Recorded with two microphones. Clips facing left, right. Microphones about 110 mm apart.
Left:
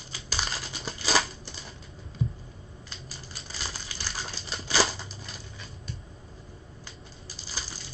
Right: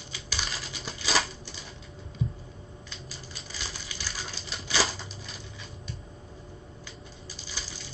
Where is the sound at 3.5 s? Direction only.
35° left (ahead or behind).